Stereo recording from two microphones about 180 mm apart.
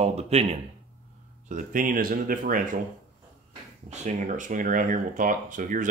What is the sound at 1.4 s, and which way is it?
Speech, 50° right (ahead or behind).